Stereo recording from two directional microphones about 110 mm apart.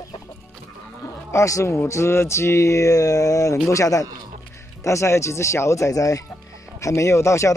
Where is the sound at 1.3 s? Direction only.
30° left (ahead or behind).